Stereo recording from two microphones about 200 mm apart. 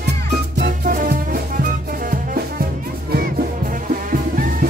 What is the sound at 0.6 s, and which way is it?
Music, 50° right (ahead or behind).